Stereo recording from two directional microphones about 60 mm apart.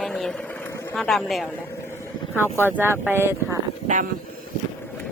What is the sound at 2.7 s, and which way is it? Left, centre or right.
Speech, right.